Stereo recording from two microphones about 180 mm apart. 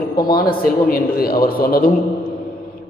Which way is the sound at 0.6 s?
55° left (ahead or behind).